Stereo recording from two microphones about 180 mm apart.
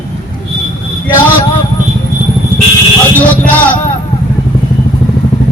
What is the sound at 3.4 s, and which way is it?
Speech, 10° left (ahead or behind).